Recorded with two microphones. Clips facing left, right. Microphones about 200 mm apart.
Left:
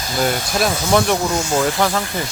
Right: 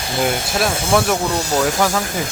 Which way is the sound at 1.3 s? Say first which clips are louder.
Even; 35° right (ahead or behind).